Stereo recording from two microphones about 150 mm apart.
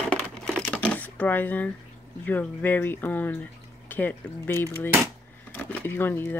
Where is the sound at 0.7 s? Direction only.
10° left (ahead or behind).